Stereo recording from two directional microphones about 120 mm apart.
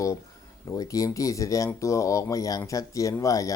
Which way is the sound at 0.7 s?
30° left (ahead or behind).